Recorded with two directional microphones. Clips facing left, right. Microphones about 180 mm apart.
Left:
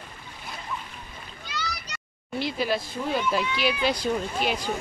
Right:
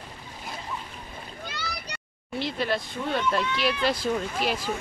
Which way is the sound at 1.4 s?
60° right (ahead or behind).